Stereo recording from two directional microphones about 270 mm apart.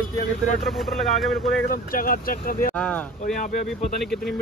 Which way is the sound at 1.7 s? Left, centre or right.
Left.